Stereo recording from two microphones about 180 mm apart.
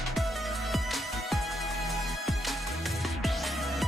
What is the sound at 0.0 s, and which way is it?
Music, centre (ahead or behind).